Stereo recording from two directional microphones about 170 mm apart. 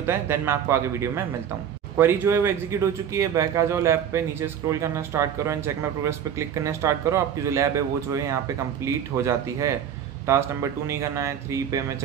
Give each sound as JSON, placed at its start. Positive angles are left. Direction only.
{"t": 0.0, "sound": "speech", "side_deg": -15}